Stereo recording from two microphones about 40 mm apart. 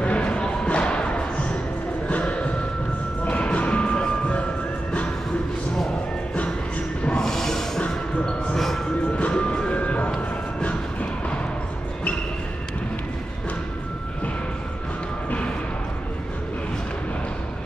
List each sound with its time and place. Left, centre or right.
0.0 s music: left
7.2 s a sound: centre
9.1 s music: left
9.8 s a sound: left
10.6 s train: left
15.2 s music: left